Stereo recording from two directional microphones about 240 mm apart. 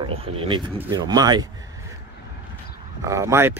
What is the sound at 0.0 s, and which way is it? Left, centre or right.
Speech, right.